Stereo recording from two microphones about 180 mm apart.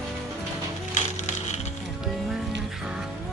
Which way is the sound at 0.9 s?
40° left (ahead or behind).